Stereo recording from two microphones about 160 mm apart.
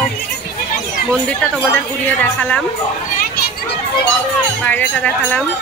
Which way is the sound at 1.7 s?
10° left (ahead or behind).